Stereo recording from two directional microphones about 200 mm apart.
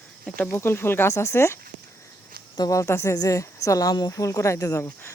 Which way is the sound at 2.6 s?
15° left (ahead or behind).